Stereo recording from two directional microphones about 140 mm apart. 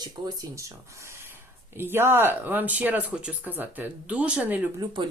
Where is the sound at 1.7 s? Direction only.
15° right (ahead or behind).